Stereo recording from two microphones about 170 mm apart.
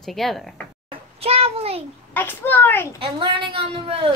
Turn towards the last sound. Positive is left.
turn(degrees=-30)  # may be behind; listen again after turning